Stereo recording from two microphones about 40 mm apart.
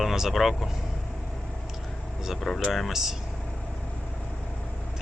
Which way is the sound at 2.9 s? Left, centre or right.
Centre.